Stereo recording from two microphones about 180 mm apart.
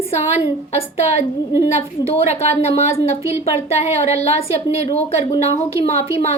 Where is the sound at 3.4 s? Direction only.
35° left (ahead or behind).